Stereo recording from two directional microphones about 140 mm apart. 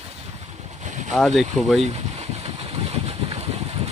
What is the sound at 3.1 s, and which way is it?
Vehicle, 45° right (ahead or behind).